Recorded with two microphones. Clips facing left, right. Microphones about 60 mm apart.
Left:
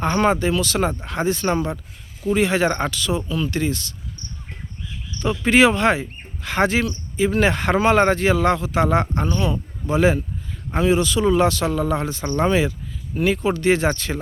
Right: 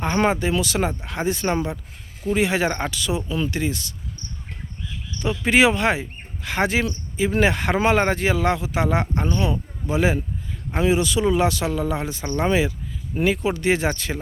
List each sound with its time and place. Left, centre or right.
0.0 s speech: centre
5.2 s speech: centre